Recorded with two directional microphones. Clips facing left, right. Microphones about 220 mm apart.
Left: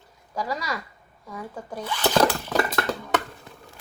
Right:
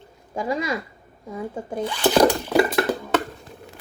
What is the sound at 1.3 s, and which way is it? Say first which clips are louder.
Zipper: right 6 dB; 25° right (ahead or behind).